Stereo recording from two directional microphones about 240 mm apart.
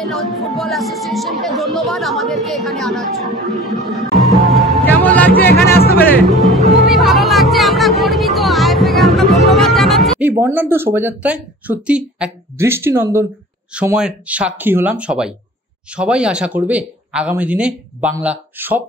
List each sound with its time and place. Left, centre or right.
0.0 s speech: centre
4.5 s music: centre
5.5 s music: left
5.9 s speech: centre
6.9 s music: centre
10.4 s speech: centre